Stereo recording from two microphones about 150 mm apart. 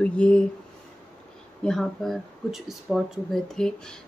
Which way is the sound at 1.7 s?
Centre (ahead or behind).